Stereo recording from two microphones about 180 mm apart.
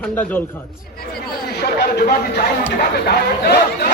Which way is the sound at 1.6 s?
65° left (ahead or behind).